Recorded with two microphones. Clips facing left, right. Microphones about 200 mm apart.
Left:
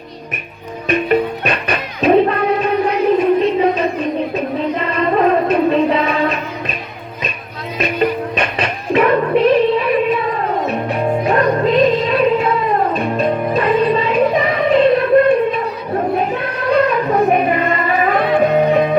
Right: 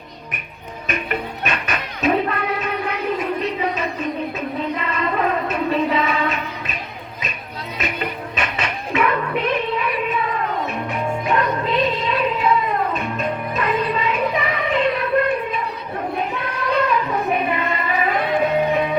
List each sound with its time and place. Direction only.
0.9 s music: 35° left (ahead or behind)
7.8 s music: 35° left (ahead or behind)
16.9 s music: 50° left (ahead or behind)